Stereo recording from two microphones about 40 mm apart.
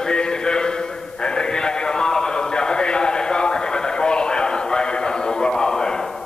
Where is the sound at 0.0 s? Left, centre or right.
Left.